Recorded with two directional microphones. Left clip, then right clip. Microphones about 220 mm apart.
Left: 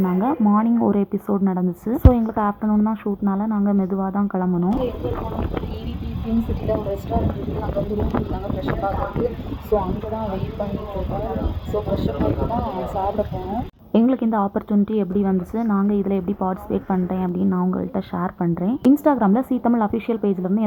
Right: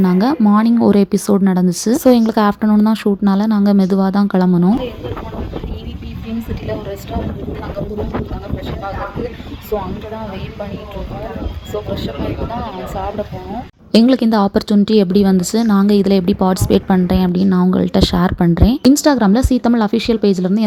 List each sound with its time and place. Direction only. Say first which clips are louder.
0.0 s a woman's voice: right 6 dB; 40° right (ahead or behind)
9.7 s speech: even; 20° right (ahead or behind)
13.9 s a woman's voice: right 7 dB; 40° right (ahead or behind)